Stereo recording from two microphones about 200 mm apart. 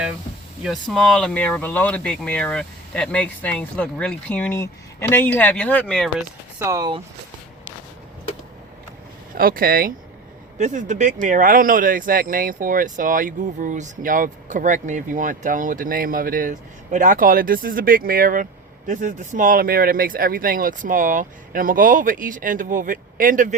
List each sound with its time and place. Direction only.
0.6 s speech: centre (ahead or behind)
6.6 s speech: 15° right (ahead or behind)
9.3 s speech: 45° right (ahead or behind)